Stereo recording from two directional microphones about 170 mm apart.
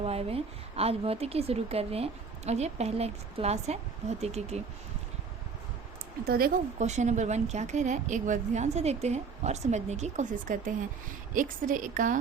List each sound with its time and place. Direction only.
0.0 s a woman's voice: 35° right (ahead or behind)
6.2 s a woman's voice: 65° right (ahead or behind)
6.7 s speech: 45° right (ahead or behind)